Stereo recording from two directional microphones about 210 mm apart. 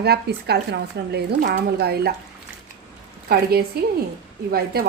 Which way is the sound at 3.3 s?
45° right (ahead or behind).